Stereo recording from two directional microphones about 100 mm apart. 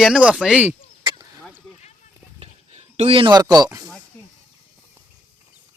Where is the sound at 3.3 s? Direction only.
40° right (ahead or behind).